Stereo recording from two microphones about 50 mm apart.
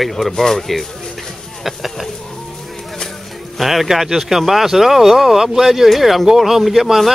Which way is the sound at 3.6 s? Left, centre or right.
Centre.